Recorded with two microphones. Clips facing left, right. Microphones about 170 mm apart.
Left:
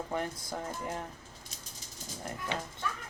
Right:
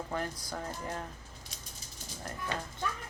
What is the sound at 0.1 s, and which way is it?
Speech, 20° left (ahead or behind).